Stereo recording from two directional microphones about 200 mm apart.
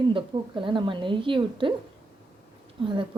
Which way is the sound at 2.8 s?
25° right (ahead or behind).